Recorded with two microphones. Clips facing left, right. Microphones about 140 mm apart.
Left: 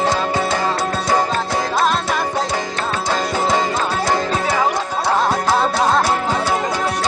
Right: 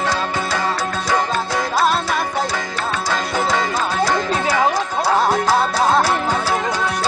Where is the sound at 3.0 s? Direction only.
25° left (ahead or behind).